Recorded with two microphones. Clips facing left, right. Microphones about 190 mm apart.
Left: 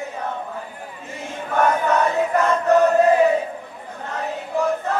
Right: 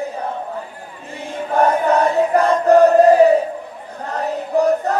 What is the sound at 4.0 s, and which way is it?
Choir, 35° right (ahead or behind).